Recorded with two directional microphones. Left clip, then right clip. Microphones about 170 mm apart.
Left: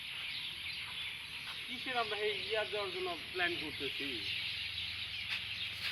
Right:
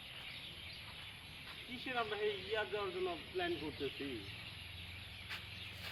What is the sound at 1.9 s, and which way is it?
Speech, 40° left (ahead or behind).